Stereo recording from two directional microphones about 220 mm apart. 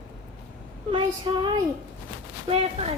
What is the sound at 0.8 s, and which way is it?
Speech, 25° right (ahead or behind).